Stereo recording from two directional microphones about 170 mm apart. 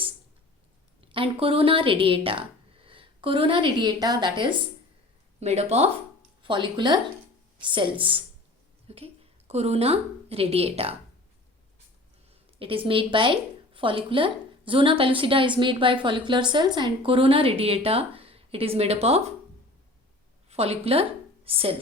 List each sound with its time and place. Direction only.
1.1 s speech: 30° right (ahead or behind)
5.4 s a woman's voice: 40° right (ahead or behind)
12.5 s a woman's voice: 30° right (ahead or behind)
20.5 s a woman's voice: 35° right (ahead or behind)